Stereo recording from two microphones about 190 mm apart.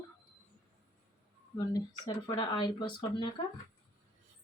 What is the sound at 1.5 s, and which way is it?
Speech, 20° left (ahead or behind).